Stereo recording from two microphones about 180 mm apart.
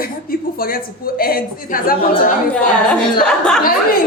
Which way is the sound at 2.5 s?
5° left (ahead or behind).